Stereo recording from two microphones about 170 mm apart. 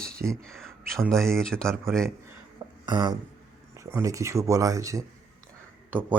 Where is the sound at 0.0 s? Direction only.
60° right (ahead or behind).